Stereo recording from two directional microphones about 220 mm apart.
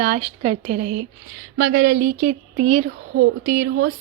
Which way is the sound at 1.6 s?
55° right (ahead or behind).